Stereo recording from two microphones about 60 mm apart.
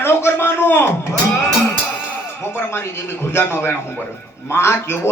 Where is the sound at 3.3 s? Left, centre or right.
Left.